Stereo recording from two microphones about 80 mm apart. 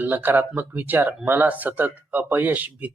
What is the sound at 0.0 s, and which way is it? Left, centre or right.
Speech, right.